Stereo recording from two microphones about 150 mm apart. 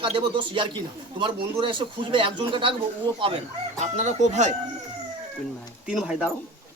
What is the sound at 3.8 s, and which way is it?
Speech, 50° right (ahead or behind).